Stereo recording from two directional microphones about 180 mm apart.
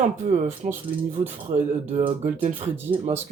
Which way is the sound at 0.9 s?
55° right (ahead or behind).